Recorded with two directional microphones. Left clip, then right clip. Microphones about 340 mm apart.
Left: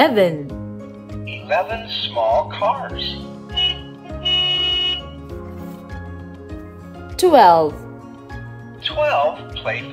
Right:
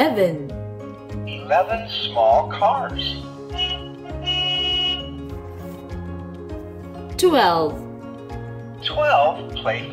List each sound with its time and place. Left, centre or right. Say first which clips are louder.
0.0 s music: left 4 dB; centre
1.5 s speech: right 1 dB; centre
4.2 s music: left 4 dB; centre
7.2 s speech: left 6 dB; centre
8.8 s speech: right 1 dB; centre